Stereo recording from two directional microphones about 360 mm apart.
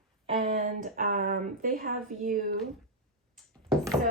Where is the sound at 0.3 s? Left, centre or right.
Centre.